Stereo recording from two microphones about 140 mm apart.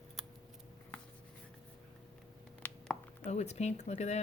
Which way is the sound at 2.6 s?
15° left (ahead or behind).